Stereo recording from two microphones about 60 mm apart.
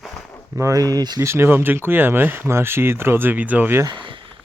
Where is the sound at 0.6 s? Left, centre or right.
Right.